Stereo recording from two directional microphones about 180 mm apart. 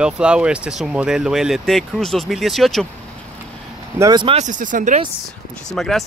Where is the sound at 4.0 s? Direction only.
25° right (ahead or behind).